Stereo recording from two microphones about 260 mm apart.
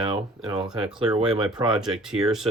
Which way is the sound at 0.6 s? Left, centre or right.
Centre.